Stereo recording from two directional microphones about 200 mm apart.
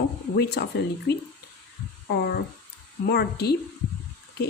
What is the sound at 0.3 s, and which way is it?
Speech, 55° left (ahead or behind).